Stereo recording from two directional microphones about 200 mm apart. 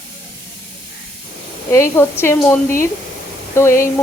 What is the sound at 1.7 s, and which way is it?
Speech, 15° left (ahead or behind).